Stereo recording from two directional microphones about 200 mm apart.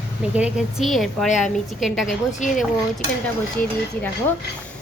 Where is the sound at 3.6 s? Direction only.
10° left (ahead or behind).